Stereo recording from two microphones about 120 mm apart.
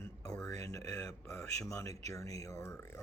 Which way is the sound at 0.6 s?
25° left (ahead or behind).